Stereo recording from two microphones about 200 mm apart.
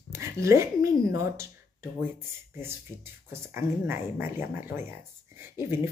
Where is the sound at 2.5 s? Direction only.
10° right (ahead or behind).